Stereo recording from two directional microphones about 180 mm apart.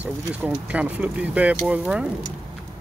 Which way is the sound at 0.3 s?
10° right (ahead or behind).